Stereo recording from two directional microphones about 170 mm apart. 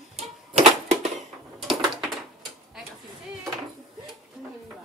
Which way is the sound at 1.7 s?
Centre (ahead or behind).